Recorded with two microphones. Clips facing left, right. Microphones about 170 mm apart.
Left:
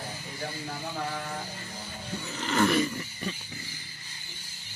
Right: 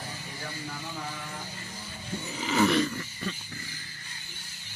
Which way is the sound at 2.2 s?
5° right (ahead or behind).